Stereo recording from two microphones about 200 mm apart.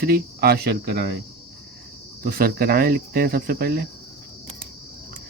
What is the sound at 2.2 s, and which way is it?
Speech, 50° right (ahead or behind).